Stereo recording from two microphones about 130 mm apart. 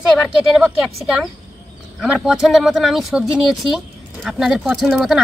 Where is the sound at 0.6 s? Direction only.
5° right (ahead or behind).